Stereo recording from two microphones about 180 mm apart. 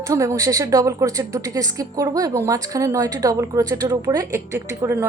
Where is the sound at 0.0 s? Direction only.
20° right (ahead or behind).